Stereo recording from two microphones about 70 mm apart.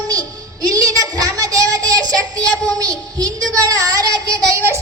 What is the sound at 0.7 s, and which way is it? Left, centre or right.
Child singing, right.